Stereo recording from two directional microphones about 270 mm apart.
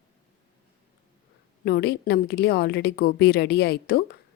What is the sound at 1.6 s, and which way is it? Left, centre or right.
A woman's voice, left.